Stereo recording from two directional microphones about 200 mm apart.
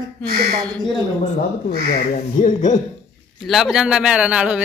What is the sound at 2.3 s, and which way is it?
Speech, 40° left (ahead or behind).